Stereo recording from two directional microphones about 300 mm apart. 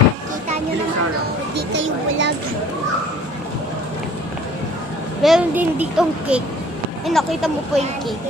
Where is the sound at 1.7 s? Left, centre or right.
Right.